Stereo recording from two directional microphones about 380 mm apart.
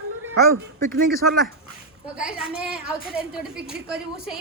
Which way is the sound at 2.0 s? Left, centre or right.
Centre.